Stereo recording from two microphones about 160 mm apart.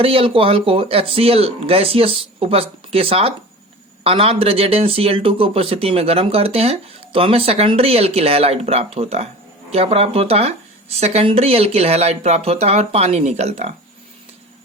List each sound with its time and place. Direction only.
0.0 s speech: 35° right (ahead or behind)